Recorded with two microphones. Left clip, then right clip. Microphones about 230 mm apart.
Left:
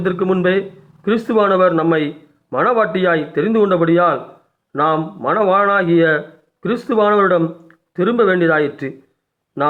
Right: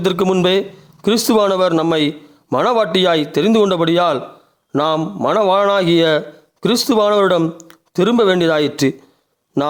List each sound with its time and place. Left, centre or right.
0.0 s a man's voice: right